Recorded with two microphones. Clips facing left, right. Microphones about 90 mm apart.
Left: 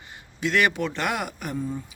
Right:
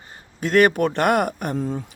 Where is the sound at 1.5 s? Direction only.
80° right.